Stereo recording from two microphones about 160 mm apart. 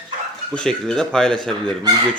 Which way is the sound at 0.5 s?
5° left (ahead or behind).